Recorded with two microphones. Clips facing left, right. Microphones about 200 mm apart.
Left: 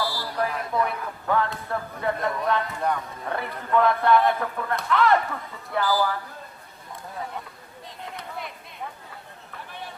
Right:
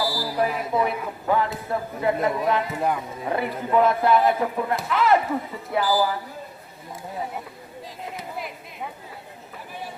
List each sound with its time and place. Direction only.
0.0 s a sound: 5° right (ahead or behind)
0.4 s speech: 5° right (ahead or behind)
4.4 s speech: 15° right (ahead or behind)
4.7 s speech: 5° right (ahead or behind)
8.1 s chop: 5° right (ahead or behind)